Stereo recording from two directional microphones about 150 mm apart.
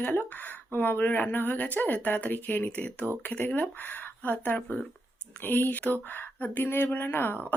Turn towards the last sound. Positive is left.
turn(degrees=15)  # may be behind; listen again after turning